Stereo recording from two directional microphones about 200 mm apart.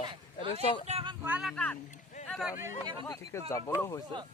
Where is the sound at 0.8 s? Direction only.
30° right (ahead or behind).